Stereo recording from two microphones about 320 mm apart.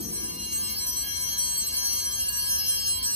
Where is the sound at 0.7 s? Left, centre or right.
Centre.